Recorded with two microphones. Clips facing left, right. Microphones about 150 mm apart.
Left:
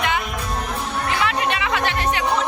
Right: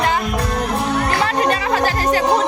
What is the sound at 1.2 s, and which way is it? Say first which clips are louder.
Music: right 4 dB; 40° right (ahead or behind).